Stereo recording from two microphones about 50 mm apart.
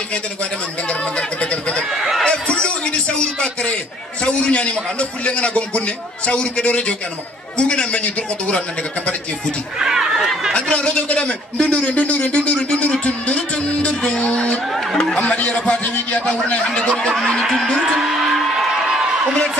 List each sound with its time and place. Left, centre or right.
1.4 s a man's voice: centre
2.2 s a sound: centre
2.6 s a man's voice: centre
9.8 s speech: centre
10.5 s a man's voice: left
15.0 s speech: centre
15.2 s a man's voice: left
17.5 s a sound: centre